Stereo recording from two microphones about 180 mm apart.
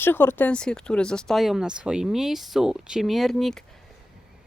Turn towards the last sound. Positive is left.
turn(degrees=0)  # may be behind; listen again after turning